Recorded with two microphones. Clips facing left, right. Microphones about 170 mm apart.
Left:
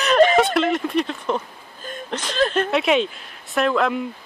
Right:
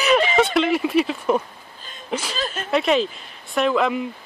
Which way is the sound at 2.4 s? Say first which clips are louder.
Left 9 dB; 60° left (ahead or behind).